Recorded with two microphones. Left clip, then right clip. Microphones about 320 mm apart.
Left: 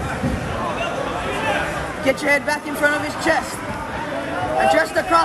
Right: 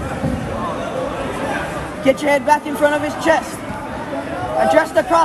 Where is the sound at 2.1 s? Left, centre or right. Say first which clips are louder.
Right 3 dB; centre.